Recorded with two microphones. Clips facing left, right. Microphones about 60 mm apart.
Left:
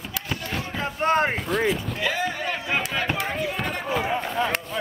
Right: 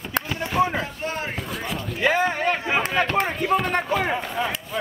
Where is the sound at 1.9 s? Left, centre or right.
Right.